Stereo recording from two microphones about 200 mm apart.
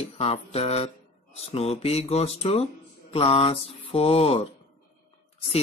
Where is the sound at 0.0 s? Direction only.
30° left (ahead or behind).